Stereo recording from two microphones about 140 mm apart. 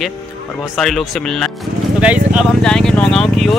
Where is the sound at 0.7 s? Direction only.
Centre (ahead or behind).